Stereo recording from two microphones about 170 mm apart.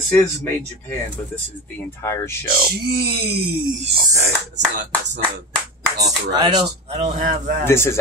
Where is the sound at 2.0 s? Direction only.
15° left (ahead or behind).